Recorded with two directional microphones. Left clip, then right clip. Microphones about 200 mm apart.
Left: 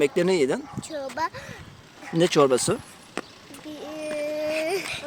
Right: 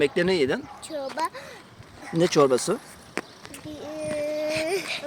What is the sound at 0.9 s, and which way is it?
Speech, centre (ahead or behind).